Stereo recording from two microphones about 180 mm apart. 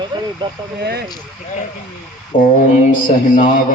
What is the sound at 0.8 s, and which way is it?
Speech, 65° right (ahead or behind).